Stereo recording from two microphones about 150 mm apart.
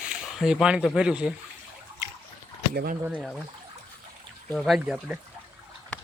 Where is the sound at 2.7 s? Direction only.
85° right.